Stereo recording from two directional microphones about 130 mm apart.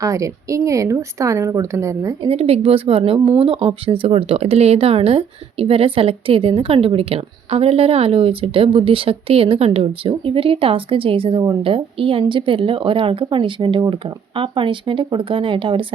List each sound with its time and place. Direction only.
0.0 s speech: 25° right (ahead or behind)
2.2 s speech: 50° right (ahead or behind)